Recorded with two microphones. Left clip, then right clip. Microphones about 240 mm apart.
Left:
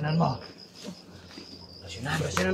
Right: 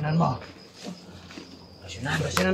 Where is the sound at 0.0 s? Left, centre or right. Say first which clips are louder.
Right 2 dB; centre.